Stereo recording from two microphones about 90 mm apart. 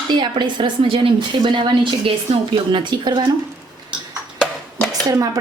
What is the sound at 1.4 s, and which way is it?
A woman's voice, 55° right (ahead or behind).